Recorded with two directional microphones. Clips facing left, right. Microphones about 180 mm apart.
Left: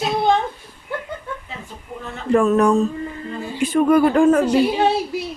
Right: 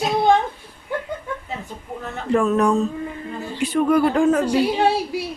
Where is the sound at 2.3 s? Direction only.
50° left (ahead or behind).